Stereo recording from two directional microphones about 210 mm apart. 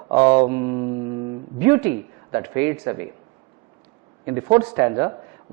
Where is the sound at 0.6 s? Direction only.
25° right (ahead or behind).